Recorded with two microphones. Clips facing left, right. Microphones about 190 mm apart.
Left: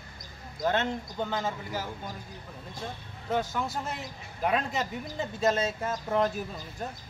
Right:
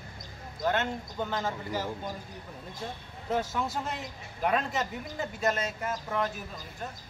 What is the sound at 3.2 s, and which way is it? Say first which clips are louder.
Speech: even; 5° right (ahead or behind).